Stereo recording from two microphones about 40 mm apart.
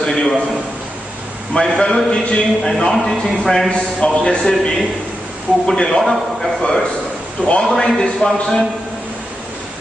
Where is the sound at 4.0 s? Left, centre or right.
Left.